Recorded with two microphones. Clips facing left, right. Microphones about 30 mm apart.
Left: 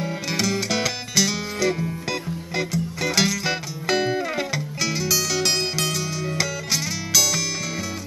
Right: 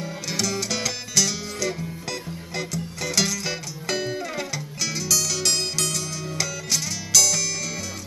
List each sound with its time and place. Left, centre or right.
0.0 s music: centre